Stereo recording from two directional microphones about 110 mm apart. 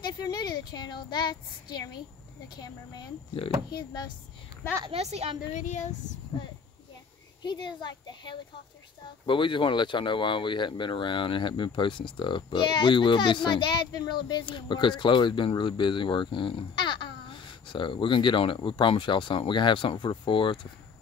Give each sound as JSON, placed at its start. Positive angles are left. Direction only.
{"t": 0.2, "sound": "speech", "side_deg": 40}
{"t": 4.9, "sound": "a woman's voice", "side_deg": -70}
{"t": 7.4, "sound": "speech", "side_deg": 45}